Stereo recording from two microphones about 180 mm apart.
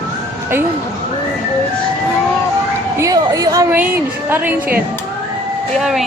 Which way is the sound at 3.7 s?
10° right (ahead or behind).